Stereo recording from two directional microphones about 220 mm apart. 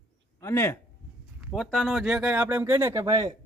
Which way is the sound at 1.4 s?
Centre (ahead or behind).